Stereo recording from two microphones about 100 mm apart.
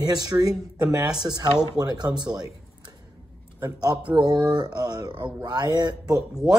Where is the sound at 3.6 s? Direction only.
45° right (ahead or behind).